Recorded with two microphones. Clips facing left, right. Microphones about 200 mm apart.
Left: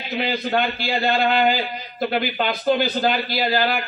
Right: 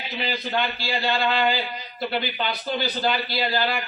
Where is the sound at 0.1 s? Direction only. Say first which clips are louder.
Left 6 dB; 50° left (ahead or behind).